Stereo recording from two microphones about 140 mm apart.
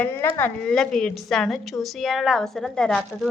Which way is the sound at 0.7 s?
5° left (ahead or behind).